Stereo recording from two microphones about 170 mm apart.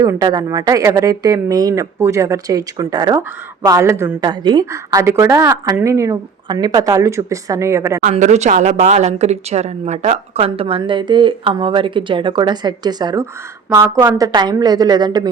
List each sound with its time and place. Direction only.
0.0 s a woman's voice: 20° right (ahead or behind)
8.1 s a woman's voice: 40° right (ahead or behind); by 15.3 s 25° right (ahead or behind)